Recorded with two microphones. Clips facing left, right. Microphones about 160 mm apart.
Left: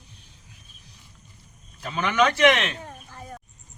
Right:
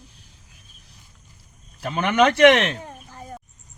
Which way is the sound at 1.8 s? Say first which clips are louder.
Right 4 dB; 50° right (ahead or behind).